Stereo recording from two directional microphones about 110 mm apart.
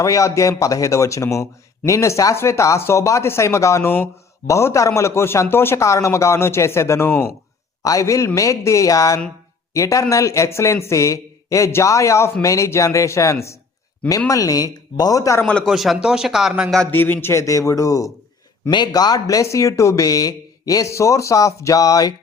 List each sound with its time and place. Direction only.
0.0 s a man's voice: 30° left (ahead or behind)
15.4 s speech: 10° left (ahead or behind)
15.7 s speech: 5° right (ahead or behind)
16.9 s a man's voice: 20° left (ahead or behind)